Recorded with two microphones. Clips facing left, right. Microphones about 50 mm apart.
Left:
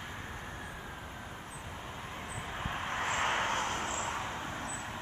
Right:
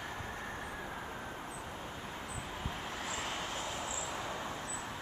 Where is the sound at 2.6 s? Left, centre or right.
Left.